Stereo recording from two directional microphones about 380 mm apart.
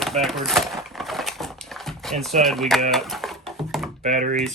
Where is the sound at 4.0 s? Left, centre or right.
Centre.